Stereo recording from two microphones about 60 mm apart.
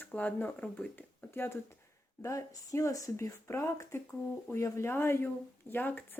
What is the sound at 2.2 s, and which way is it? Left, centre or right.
Speech, left.